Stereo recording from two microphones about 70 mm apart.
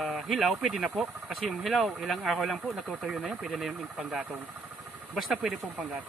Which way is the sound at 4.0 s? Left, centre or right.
Centre.